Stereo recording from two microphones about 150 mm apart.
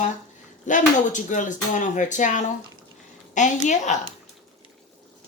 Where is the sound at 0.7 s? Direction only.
55° left (ahead or behind).